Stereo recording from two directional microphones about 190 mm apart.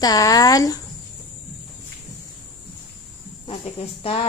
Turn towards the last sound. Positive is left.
turn(degrees=30)  # may be behind; listen again after turning